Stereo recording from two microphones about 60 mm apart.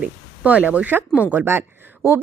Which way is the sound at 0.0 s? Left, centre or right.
Right.